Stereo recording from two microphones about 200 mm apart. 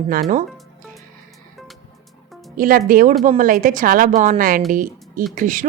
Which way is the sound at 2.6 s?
45° right (ahead or behind).